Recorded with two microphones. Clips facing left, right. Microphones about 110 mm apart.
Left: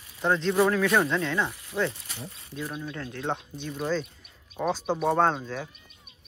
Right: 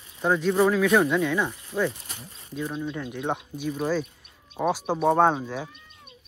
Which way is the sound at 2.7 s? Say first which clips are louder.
Right 5 dB; 20° right (ahead or behind).